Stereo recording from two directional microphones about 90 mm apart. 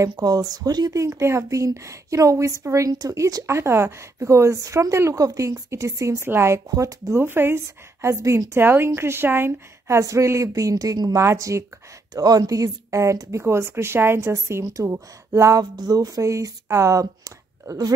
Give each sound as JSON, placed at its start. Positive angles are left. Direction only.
{"t": 0.2, "sound": "speech", "side_deg": -45}
{"t": 1.0, "sound": "speech", "side_deg": -30}
{"t": 3.4, "sound": "speech", "side_deg": -30}
{"t": 7.2, "sound": "speech", "side_deg": -25}
{"t": 8.5, "sound": "speech", "side_deg": -25}
{"t": 12.1, "sound": "speech", "side_deg": -45}
{"t": 15.7, "sound": "speech", "side_deg": -45}